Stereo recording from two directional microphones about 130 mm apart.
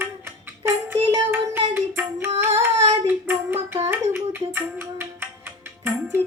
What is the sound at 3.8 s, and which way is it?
Music, 20° right (ahead or behind).